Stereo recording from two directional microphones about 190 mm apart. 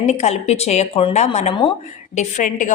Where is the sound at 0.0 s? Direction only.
35° left (ahead or behind).